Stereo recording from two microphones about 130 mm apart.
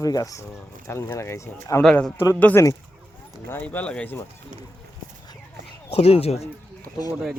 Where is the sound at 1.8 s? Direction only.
5° left (ahead or behind).